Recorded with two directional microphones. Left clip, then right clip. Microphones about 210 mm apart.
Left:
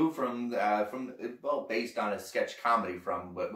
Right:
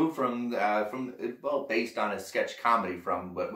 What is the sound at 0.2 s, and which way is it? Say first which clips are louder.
Speech: right 3 dB; 15° right (ahead or behind).